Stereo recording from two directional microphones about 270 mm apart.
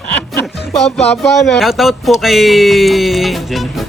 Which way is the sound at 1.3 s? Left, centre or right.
Centre.